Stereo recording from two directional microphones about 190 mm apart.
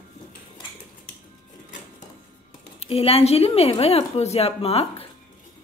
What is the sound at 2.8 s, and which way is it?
A woman's voice, 30° left (ahead or behind).